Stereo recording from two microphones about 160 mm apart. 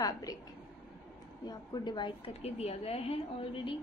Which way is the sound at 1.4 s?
25° left (ahead or behind).